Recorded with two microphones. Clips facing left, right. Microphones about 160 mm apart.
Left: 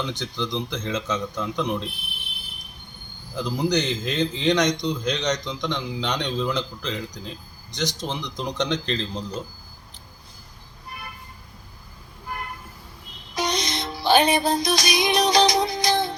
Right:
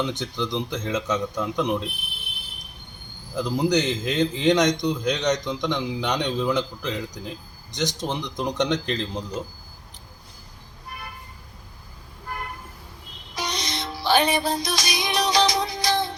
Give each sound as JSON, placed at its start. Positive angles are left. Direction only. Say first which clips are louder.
{"t": 0.1, "sound": "a man's voice", "louder": "right 1 dB", "side_deg": -20}
{"t": 0.9, "sound": "a man's voice", "louder": "right 2 dB", "side_deg": 0}
{"t": 1.4, "sound": "a man's voice", "louder": "right 2 dB", "side_deg": -15}
{"t": 3.3, "sound": "a man's voice", "louder": "right 2 dB", "side_deg": -15}
{"t": 4.4, "sound": "a man's voice", "louder": "right 2 dB", "side_deg": 0}
{"t": 5.2, "sound": "a man's voice", "louder": "right 2 dB", "side_deg": -15}
{"t": 13.3, "sound": "music", "louder": "left 4 dB", "side_deg": 20}